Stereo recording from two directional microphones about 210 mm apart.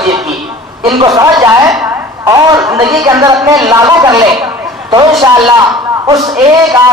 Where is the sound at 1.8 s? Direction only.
15° right (ahead or behind).